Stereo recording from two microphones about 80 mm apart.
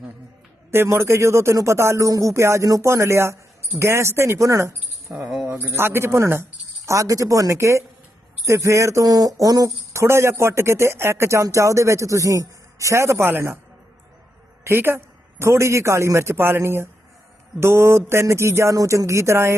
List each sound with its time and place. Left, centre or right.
0.7 s speech: right
5.3 s a sound: centre
5.5 s speech: right
14.6 s speech: right